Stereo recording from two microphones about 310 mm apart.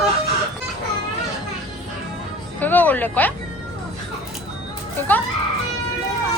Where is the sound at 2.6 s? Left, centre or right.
Centre.